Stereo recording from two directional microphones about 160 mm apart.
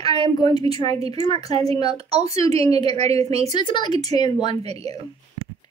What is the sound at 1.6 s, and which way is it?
A woman's voice, 35° right (ahead or behind).